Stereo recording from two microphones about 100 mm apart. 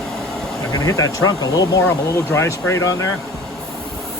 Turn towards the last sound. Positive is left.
turn(degrees=30)  # may be behind; listen again after turning